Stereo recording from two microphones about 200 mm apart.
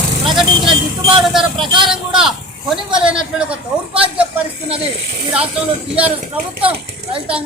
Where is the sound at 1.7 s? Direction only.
25° right (ahead or behind).